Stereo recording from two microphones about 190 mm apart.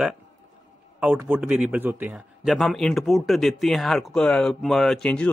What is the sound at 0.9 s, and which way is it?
A man's voice, 5° right (ahead or behind).